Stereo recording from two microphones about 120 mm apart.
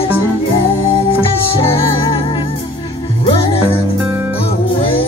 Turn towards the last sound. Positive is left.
turn(degrees=50)  # may be behind; listen again after turning